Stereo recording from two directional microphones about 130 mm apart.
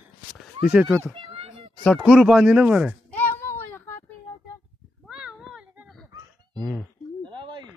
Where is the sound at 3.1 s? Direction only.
15° left (ahead or behind).